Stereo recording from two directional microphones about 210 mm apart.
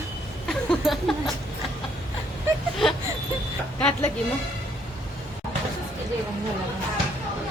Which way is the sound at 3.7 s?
5° left (ahead or behind).